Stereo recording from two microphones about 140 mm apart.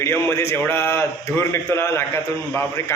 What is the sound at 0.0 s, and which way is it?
A man's voice, 15° left (ahead or behind).